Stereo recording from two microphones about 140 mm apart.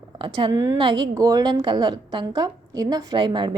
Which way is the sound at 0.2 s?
35° right (ahead or behind).